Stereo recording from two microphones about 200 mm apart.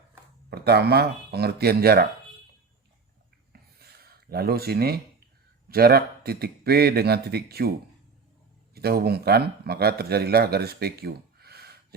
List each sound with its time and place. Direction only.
0.5 s speech: 55° right (ahead or behind)
3.5 s a sound: 50° right (ahead or behind)
5.6 s speech: 50° right (ahead or behind)
8.7 s speech: 50° right (ahead or behind)